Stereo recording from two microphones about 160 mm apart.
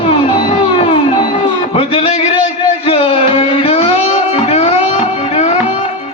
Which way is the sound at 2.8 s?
35° left (ahead or behind).